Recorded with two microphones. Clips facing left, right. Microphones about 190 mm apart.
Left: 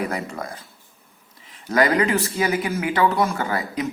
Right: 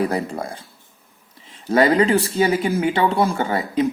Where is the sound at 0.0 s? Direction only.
30° right (ahead or behind).